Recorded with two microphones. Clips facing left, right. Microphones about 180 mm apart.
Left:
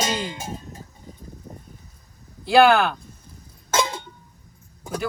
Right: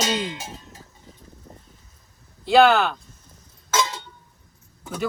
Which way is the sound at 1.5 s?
15° left (ahead or behind).